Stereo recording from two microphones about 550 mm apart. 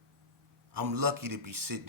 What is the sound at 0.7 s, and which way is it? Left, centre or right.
Speech, right.